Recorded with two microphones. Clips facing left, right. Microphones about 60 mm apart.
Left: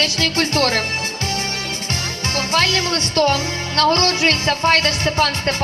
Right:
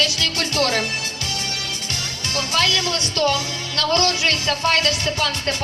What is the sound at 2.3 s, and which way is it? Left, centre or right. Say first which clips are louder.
Speech: left 2 dB; left.